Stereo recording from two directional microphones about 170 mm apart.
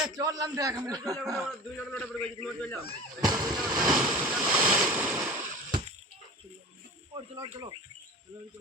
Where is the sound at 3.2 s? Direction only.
20° right (ahead or behind).